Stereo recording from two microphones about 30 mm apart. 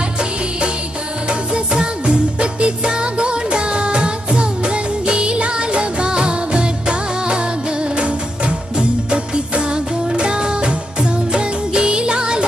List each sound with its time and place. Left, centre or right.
1.5 s music: right